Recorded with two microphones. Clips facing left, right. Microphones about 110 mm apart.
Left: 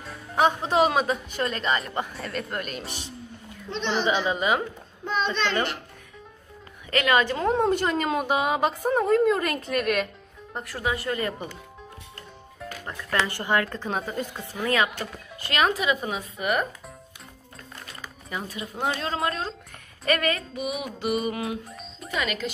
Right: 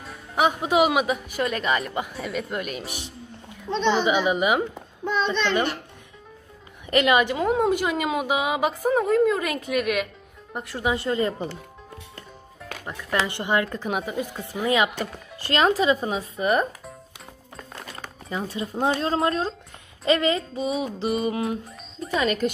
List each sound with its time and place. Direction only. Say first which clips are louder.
0.0 s a woman's voice: even; 10° right (ahead or behind)
4.0 s speech: right 3 dB; 15° right (ahead or behind)
6.9 s a woman's voice: right 3 dB; 20° right (ahead or behind)
10.5 s a sound: right 3 dB; 20° right (ahead or behind)
13.3 s a sound: right 1 dB; 20° right (ahead or behind)
13.7 s speech: right 2 dB; 10° right (ahead or behind)
15.4 s speech: right 4 dB; 30° right (ahead or behind)
18.3 s a sound: right 5 dB; 30° right (ahead or behind)
18.9 s speech: right 5 dB; 30° right (ahead or behind)
20.1 s a sound: right 4 dB; 25° right (ahead or behind)
21.6 s music: right 4 dB; centre (ahead or behind)
22.1 s speech: right 5 dB; 35° right (ahead or behind)